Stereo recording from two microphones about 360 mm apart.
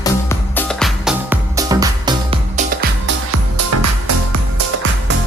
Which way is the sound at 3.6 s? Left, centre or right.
Right.